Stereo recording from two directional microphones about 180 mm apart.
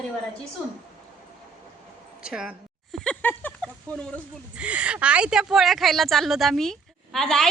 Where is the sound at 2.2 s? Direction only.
5° right (ahead or behind).